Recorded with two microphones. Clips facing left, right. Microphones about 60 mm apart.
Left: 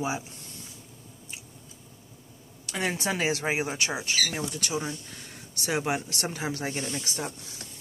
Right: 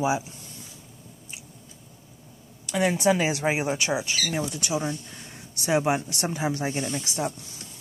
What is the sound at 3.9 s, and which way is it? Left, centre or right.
Speech, centre.